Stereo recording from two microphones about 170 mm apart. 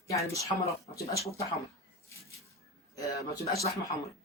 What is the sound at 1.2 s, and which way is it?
Speech, 35° left (ahead or behind).